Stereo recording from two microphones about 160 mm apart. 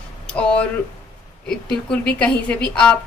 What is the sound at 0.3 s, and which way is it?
A woman's voice, 5° left (ahead or behind).